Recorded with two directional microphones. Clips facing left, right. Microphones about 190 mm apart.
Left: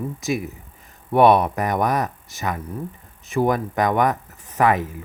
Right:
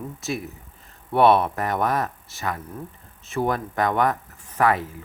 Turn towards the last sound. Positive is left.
turn(degrees=20)  # may be behind; listen again after turning